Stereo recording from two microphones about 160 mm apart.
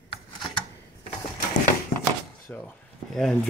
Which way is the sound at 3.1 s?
Centre (ahead or behind).